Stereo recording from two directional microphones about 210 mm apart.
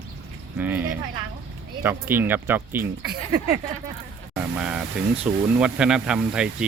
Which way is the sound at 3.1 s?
45° right (ahead or behind).